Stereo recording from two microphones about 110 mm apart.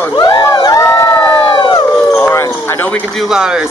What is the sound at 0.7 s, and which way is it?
Crowd, 30° left (ahead or behind).